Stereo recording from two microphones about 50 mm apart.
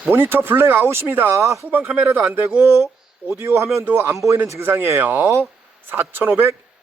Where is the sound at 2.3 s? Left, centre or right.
Right.